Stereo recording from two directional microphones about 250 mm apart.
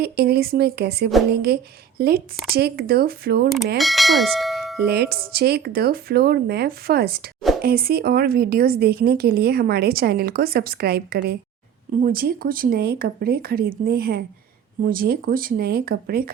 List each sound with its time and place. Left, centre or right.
0.0 s a woman's voice: right
3.8 s speech: centre
4.8 s a woman's voice: right